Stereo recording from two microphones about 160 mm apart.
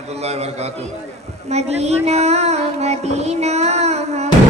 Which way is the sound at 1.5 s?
45° right (ahead or behind).